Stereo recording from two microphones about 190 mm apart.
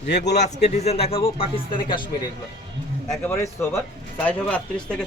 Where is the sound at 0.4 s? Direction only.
35° left (ahead or behind).